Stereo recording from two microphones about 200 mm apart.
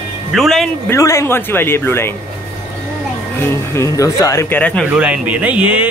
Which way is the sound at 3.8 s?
15° left (ahead or behind).